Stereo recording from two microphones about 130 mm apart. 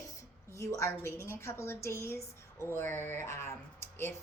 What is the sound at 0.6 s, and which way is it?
A woman's voice, 25° left (ahead or behind).